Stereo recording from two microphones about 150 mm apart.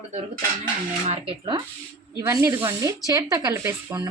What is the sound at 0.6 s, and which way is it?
Speech, 35° right (ahead or behind).